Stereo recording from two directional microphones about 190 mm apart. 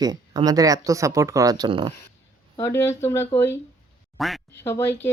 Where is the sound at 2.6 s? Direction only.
15° left (ahead or behind).